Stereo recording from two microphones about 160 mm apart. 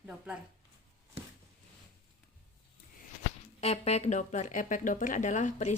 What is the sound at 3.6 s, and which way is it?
Speech, 40° left (ahead or behind).